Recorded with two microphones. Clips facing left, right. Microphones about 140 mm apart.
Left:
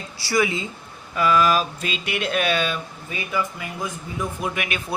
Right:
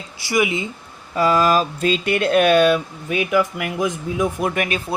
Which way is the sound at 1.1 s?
35° right (ahead or behind).